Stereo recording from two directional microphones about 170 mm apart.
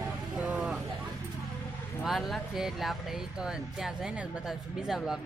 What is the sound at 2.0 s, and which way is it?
Speech, centre (ahead or behind).